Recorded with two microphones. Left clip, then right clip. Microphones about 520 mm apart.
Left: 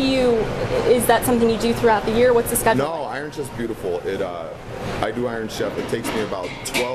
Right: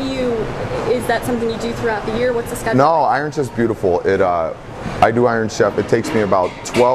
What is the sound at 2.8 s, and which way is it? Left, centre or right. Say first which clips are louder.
Speech: right 11 dB; right.